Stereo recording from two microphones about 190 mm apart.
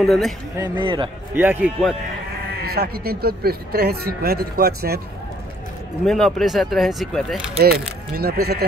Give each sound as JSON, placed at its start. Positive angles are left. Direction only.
{"t": 0.0, "sound": "speech", "side_deg": 0}
{"t": 0.6, "sound": "speech", "side_deg": -25}
{"t": 1.3, "sound": "a man's voice", "side_deg": -10}
{"t": 2.6, "sound": "speech", "side_deg": -55}
{"t": 6.0, "sound": "speech", "side_deg": 0}
{"t": 8.2, "sound": "speech", "side_deg": -55}